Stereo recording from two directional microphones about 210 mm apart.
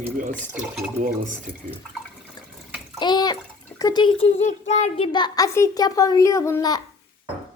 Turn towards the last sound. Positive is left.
turn(degrees=15)  # may be behind; listen again after turning